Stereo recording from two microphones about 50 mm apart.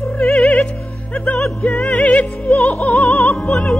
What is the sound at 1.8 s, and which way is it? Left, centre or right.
Music, left.